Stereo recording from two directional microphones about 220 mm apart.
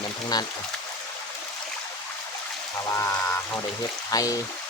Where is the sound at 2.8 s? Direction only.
15° left (ahead or behind).